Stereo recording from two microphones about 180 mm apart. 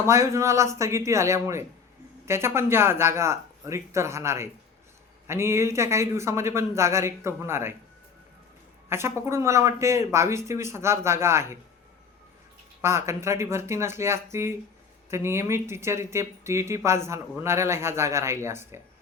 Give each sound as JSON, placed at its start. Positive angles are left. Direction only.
{"t": 0.0, "sound": "speech", "side_deg": -15}
{"t": 8.9, "sound": "speech", "side_deg": -15}
{"t": 12.8, "sound": "speech", "side_deg": -15}